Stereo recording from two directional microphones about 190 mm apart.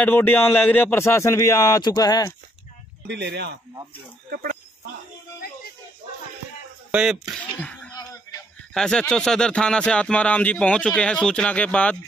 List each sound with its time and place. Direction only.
0.0 s speech: 10° left (ahead or behind)
3.1 s speech: 60° right (ahead or behind)
4.3 s speech: 50° right (ahead or behind)
6.9 s speech: 5° right (ahead or behind)
7.6 s a sound: 5° left (ahead or behind)
7.9 s a sound: 20° left (ahead or behind)
8.7 s speech: 5° left (ahead or behind)